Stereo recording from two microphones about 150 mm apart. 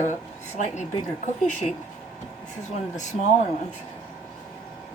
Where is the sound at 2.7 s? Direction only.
55° left (ahead or behind).